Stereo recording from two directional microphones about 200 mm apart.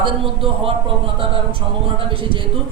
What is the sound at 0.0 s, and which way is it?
Speech, 25° right (ahead or behind).